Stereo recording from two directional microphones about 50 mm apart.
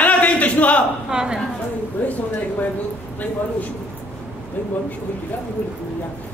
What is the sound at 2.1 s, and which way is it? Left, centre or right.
Speech, left.